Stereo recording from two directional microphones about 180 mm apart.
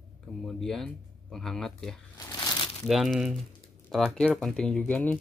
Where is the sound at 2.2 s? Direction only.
20° left (ahead or behind).